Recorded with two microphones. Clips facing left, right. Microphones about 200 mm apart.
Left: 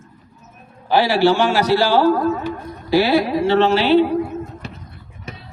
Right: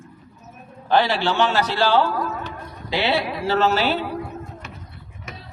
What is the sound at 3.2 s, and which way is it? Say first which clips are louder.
Speech: left 8 dB; 35° left (ahead or behind).